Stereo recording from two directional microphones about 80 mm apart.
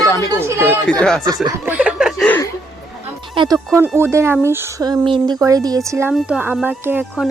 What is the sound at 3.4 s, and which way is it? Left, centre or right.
Music, right.